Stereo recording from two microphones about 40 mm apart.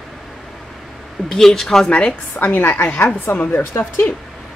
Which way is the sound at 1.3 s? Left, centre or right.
Centre.